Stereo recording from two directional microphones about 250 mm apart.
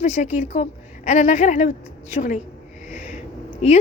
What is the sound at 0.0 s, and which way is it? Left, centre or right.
A woman's voice, left.